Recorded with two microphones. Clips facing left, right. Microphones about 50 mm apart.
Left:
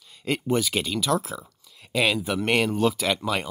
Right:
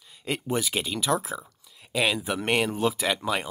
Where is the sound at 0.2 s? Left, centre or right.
Centre.